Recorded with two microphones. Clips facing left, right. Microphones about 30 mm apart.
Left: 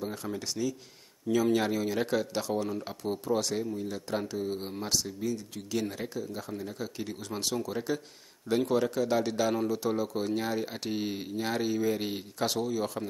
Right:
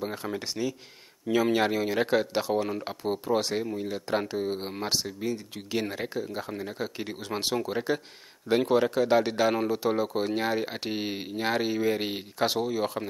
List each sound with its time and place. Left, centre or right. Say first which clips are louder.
0.0 s speech: right 3 dB; right